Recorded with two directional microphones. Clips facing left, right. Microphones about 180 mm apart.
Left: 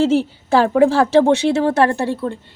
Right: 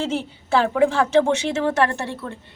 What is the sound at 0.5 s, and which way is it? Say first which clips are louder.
A woman's voice: left 5 dB; 40° left (ahead or behind).